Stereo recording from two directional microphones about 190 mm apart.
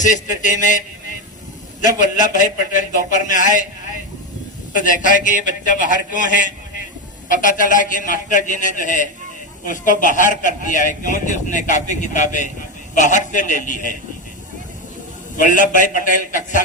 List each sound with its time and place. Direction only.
0.0 s a man's voice: 40° left (ahead or behind)
15.4 s a man's voice: 40° left (ahead or behind)